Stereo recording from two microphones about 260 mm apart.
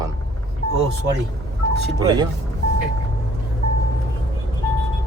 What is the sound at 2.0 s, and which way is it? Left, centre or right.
Speech, centre.